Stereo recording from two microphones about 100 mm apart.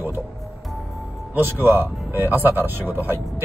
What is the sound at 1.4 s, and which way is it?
Speech, 20° right (ahead or behind).